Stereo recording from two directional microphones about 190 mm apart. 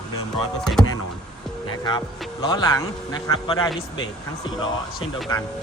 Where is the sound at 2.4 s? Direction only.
20° left (ahead or behind).